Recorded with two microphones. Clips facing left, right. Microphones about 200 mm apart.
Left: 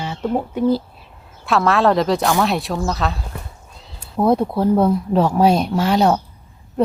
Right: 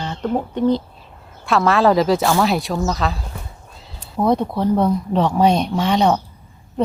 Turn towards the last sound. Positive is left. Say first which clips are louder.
# left 1 dB
turn(degrees=5)  # may be behind; listen again after turning